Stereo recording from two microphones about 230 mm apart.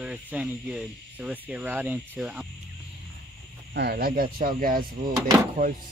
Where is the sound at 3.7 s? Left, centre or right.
Right.